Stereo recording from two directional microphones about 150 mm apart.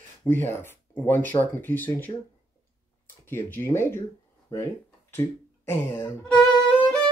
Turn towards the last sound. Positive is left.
turn(degrees=5)  # may be behind; listen again after turning